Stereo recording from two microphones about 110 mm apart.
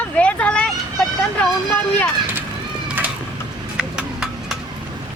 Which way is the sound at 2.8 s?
15° right (ahead or behind).